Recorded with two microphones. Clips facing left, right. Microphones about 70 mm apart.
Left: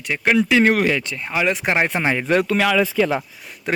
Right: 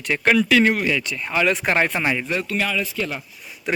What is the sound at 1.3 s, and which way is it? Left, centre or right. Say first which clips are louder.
Speech: even; centre.